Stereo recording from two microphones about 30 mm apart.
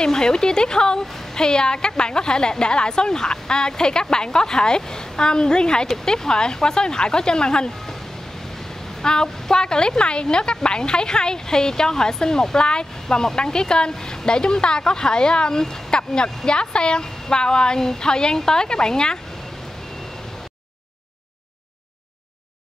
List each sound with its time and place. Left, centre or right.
0.0 s a woman's voice: left
9.0 s a woman's voice: left